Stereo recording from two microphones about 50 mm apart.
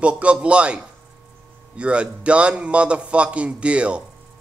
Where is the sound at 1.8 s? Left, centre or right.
Right.